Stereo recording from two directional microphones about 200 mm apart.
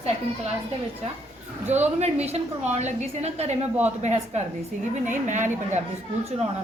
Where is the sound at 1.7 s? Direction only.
35° right (ahead or behind).